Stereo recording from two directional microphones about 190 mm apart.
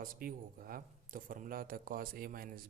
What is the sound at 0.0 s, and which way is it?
Speech, 50° right (ahead or behind).